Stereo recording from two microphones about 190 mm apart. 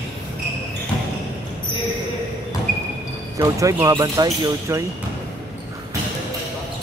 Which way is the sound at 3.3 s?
15° right (ahead or behind).